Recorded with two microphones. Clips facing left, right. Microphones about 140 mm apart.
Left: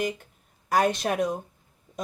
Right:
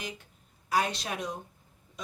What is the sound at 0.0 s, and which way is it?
A woman's voice, 55° left (ahead or behind).